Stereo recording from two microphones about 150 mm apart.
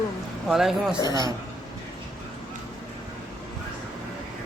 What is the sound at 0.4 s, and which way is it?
Speech, centre (ahead or behind).